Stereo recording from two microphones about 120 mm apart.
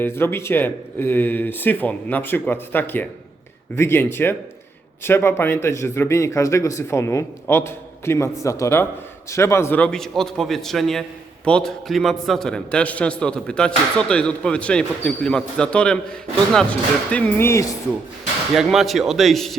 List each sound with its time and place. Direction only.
0.0 s a man's voice: 20° left (ahead or behind)
17.1 s a man's voice: 10° left (ahead or behind)
17.4 s a man's voice: 25° left (ahead or behind)
18.5 s a man's voice: centre (ahead or behind)